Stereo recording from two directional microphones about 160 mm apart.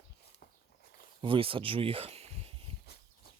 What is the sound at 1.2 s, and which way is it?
Speech, 35° right (ahead or behind).